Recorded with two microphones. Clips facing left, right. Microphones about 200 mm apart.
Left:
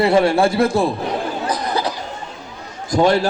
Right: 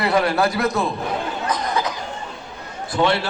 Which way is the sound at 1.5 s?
35° left (ahead or behind).